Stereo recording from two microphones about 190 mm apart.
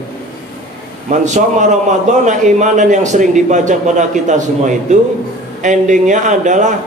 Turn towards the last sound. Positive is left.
turn(degrees=-40)  # may be behind; listen again after turning